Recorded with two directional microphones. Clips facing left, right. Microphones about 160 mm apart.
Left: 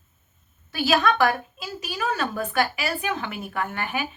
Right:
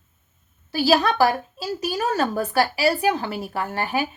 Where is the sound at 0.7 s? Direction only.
35° right (ahead or behind).